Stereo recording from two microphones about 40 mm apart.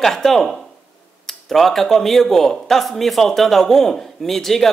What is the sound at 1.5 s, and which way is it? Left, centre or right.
Speech, centre.